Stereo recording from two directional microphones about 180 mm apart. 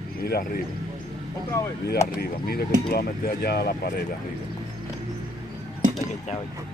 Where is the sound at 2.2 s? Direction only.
60° left (ahead or behind).